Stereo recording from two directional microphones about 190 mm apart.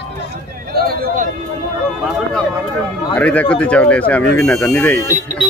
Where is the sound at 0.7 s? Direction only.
55° right (ahead or behind).